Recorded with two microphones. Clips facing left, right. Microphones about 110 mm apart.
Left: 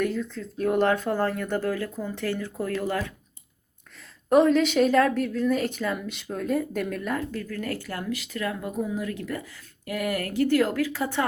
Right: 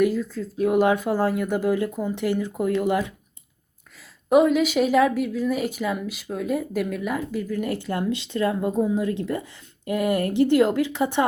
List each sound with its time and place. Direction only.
0.0 s a woman's voice: 5° right (ahead or behind)
4.3 s a woman's voice: 5° right (ahead or behind)